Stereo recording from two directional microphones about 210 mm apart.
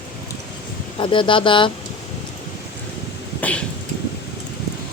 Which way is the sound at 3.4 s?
5° left (ahead or behind).